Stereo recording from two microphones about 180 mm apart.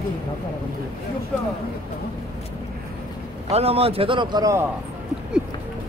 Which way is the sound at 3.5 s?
35° right (ahead or behind).